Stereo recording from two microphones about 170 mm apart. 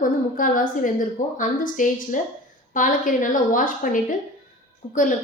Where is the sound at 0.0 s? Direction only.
50° left (ahead or behind).